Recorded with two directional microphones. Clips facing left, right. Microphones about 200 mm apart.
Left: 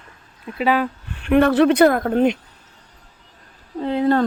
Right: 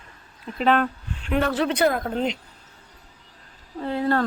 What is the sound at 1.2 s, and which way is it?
Speech, 60° left (ahead or behind).